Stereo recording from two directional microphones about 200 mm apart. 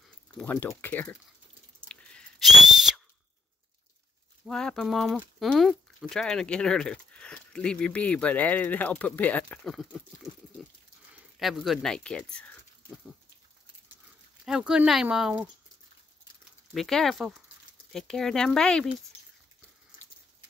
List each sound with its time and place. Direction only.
0.4 s speech: 10° left (ahead or behind)
1.9 s whistle: 5° left (ahead or behind)
4.5 s speech: 5° left (ahead or behind)
11.3 s speech: centre (ahead or behind)
14.4 s speech: 5° right (ahead or behind)
16.7 s speech: centre (ahead or behind)